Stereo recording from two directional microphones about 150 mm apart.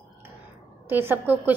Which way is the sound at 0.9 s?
15° right (ahead or behind).